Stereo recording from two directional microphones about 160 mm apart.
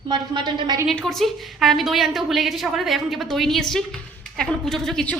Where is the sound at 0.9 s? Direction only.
Centre (ahead or behind).